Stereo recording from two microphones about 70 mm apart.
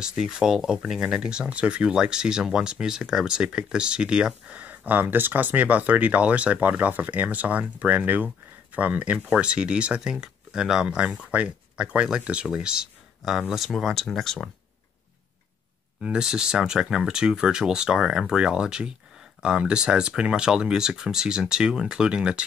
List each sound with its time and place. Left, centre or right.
0.0 s speech: centre
16.0 s speech: centre